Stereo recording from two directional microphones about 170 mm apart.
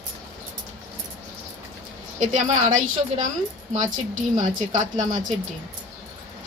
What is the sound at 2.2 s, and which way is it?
Speech, 45° right (ahead or behind).